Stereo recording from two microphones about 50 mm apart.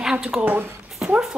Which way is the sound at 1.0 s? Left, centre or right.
Centre.